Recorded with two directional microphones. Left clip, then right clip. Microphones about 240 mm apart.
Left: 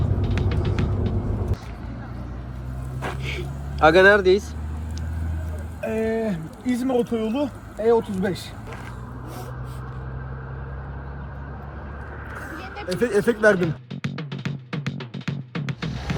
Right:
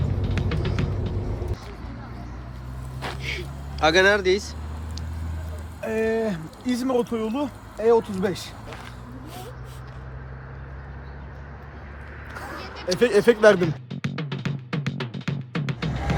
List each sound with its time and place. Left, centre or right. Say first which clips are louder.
0.2 s music: even; centre
3.0 s vehicle: even; centre
5.8 s speech: right 1 dB; centre
12.6 s a sound: left 1 dB; centre
12.9 s speech: right 3 dB; centre
13.6 s music: even; centre